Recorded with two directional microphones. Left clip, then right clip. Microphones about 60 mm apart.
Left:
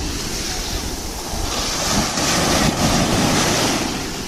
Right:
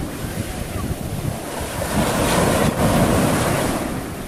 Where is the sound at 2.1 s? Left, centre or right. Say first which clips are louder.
Right 4 dB; right.